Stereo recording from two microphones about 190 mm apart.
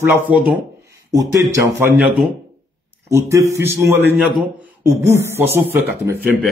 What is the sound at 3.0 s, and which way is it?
A man's voice, 15° right (ahead or behind).